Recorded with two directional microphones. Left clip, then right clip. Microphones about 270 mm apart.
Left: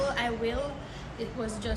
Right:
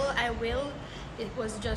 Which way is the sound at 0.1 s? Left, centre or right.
Centre.